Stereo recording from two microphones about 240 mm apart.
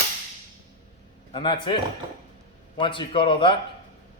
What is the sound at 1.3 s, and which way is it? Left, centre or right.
Speech, centre.